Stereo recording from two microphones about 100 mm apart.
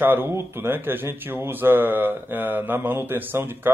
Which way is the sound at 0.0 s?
20° right (ahead or behind).